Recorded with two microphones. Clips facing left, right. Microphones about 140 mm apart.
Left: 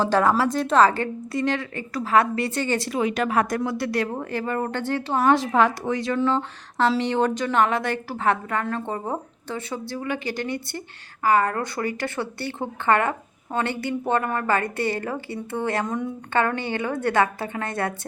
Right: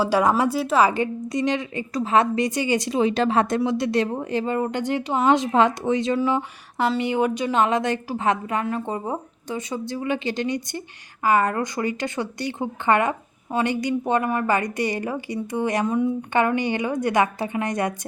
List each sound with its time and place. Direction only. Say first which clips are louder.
0.0 s speech: right 1 dB; 10° right (ahead or behind)
3.0 s speech: right 3 dB; 30° right (ahead or behind)